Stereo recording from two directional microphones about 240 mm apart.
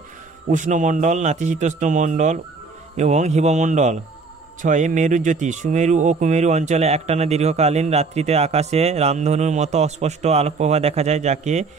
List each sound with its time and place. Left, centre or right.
0.5 s speech: right